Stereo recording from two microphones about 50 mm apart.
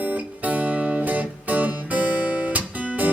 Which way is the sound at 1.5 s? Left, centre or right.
Right.